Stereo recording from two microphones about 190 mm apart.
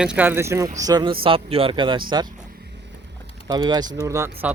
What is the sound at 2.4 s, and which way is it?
Vehicle, 55° right (ahead or behind).